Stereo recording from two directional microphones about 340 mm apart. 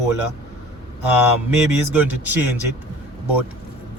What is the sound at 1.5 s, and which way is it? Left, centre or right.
A man's voice, centre.